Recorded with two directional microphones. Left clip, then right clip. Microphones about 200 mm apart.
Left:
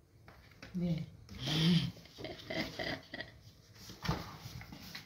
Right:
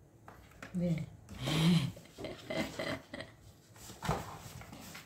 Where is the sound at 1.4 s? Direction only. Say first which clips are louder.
Even; 15° right (ahead or behind).